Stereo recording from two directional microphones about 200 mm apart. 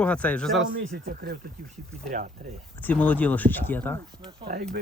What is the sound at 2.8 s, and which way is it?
Speech, 10° left (ahead or behind).